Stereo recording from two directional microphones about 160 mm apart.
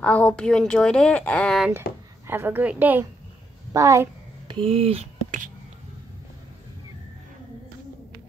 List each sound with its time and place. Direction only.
0.0 s a woman's voice: 10° left (ahead or behind)
2.2 s a woman's voice: 15° right (ahead or behind)
4.5 s speech: 35° right (ahead or behind)